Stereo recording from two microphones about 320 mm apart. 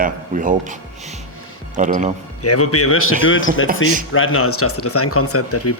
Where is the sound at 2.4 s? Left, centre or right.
Left.